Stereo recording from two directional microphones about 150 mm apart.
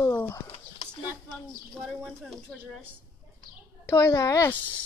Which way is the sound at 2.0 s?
Centre (ahead or behind).